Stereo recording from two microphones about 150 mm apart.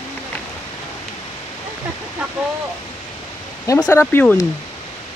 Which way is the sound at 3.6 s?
20° left (ahead or behind).